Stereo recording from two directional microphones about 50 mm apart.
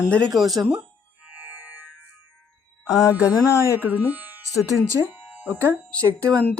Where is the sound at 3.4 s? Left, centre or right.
Left.